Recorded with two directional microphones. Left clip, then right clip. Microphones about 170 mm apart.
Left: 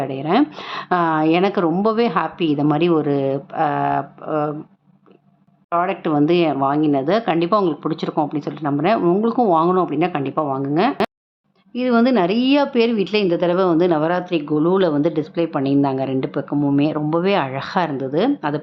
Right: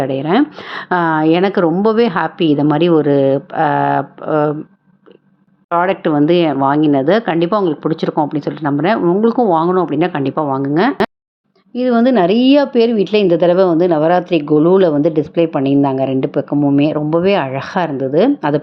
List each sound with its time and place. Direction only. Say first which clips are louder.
0.0 s a woman's voice: right 4 dB; 20° right (ahead or behind)
5.6 s a woman's voice: right 5 dB; 20° right (ahead or behind)
9.0 s speech: right 3 dB; centre (ahead or behind)
9.2 s a woman's voice: right 4 dB; 15° right (ahead or behind)